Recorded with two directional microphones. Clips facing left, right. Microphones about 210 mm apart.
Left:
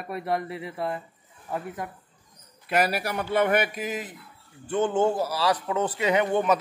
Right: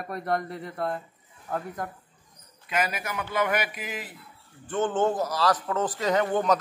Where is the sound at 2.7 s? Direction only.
40° left (ahead or behind); by 4.2 s 20° left (ahead or behind).